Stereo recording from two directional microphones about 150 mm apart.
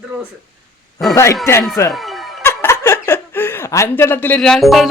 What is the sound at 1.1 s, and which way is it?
Speech, 20° left (ahead or behind).